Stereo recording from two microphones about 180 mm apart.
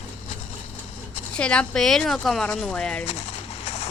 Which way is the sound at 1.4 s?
5° left (ahead or behind).